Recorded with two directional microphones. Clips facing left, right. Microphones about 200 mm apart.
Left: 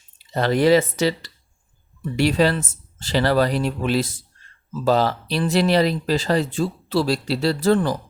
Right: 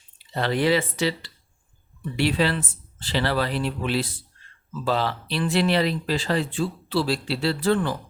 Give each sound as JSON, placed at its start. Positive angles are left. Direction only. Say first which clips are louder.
{"t": 0.2, "sound": "speech", "louder": "left 5 dB", "side_deg": 45}